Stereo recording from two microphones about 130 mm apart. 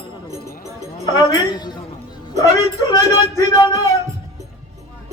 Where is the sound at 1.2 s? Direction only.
30° left (ahead or behind).